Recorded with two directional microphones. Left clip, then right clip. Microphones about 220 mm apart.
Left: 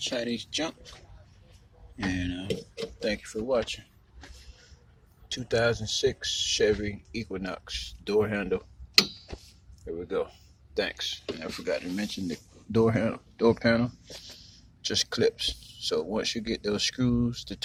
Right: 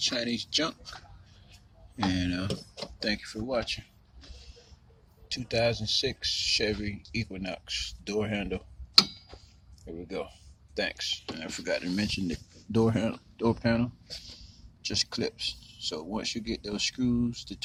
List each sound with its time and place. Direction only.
0.0 s speech: 25° right (ahead or behind)
2.1 s speech: 35° right (ahead or behind)
3.0 s speech: 20° right (ahead or behind)
5.3 s speech: 5° right (ahead or behind)
9.8 s speech: 10° right (ahead or behind)